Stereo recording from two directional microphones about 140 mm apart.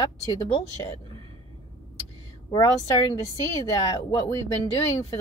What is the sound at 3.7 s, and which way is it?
Speech, 25° left (ahead or behind).